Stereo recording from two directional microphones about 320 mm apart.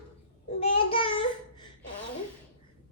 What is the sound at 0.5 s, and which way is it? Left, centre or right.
Child singing, centre.